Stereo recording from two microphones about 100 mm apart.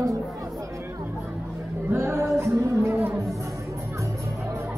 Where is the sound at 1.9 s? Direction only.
25° right (ahead or behind).